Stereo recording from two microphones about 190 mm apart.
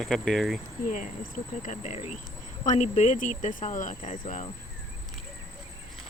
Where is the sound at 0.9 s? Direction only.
40° left (ahead or behind).